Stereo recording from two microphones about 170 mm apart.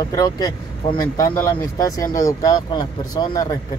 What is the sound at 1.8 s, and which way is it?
Speech, 20° left (ahead or behind).